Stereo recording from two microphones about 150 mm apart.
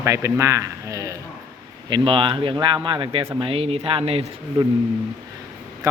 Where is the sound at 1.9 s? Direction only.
35° right (ahead or behind).